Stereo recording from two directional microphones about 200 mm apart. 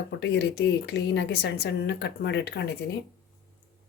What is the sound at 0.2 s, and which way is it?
Speech, 55° left (ahead or behind).